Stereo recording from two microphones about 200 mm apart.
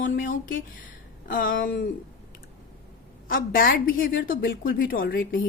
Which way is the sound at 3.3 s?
45° left (ahead or behind).